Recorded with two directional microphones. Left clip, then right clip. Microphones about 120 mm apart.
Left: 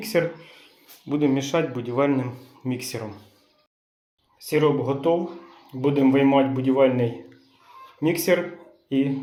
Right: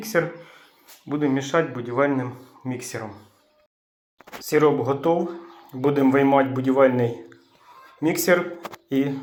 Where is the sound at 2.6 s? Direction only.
30° left (ahead or behind).